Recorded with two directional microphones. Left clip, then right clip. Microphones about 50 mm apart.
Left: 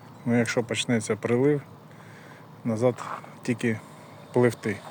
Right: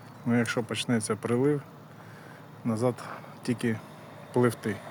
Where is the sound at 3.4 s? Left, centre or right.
Left.